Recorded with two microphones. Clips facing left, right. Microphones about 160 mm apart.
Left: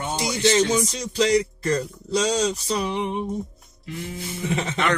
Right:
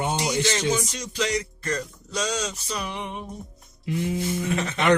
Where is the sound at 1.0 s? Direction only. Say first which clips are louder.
Left 7 dB; 35° left (ahead or behind).